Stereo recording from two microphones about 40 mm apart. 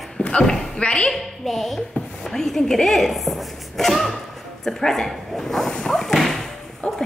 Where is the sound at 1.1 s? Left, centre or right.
Centre.